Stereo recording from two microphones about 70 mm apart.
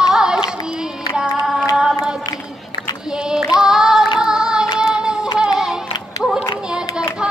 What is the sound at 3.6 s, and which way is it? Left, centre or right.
Music, centre.